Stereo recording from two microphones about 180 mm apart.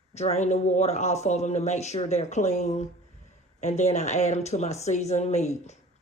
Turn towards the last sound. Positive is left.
turn(degrees=40)  # may be behind; listen again after turning